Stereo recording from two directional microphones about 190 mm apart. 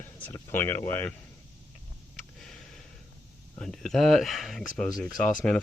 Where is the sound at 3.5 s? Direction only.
5° left (ahead or behind).